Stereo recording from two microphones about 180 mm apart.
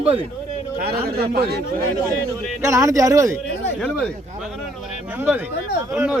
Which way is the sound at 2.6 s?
15° right (ahead or behind).